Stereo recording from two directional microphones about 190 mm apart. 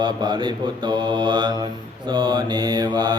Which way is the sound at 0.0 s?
25° right (ahead or behind).